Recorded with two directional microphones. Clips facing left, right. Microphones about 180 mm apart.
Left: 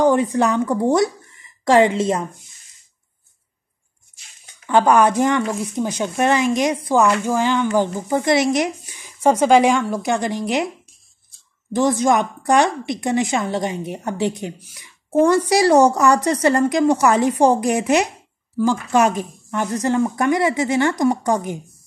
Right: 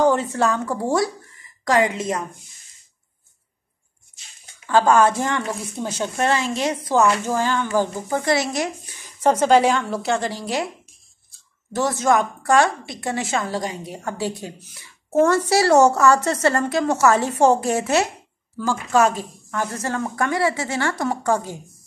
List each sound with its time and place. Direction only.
0.0 s a woman's voice: 15° left (ahead or behind)
4.6 s a woman's voice: 15° left (ahead or behind)
11.7 s a woman's voice: 15° left (ahead or behind)